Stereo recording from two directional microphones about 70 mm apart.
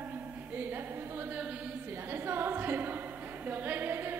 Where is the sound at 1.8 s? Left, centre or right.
Right.